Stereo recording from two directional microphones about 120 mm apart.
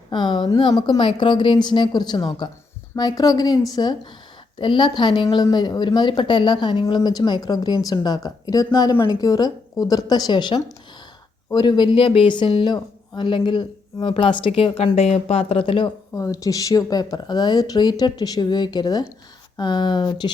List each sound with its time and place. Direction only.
0.1 s speech: 40° left (ahead or behind)
16.1 s speech: 25° left (ahead or behind)